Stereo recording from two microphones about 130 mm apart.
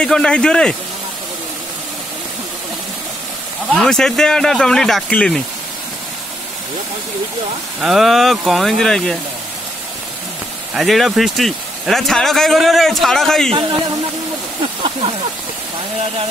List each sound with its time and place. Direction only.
0.0 s speech: 5° left (ahead or behind)
3.7 s speech: 5° left (ahead or behind)
7.8 s speech: centre (ahead or behind)
10.7 s speech: centre (ahead or behind)
13.5 s speech: 40° right (ahead or behind)